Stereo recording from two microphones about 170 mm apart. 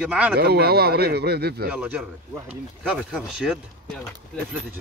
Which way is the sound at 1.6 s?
5° right (ahead or behind).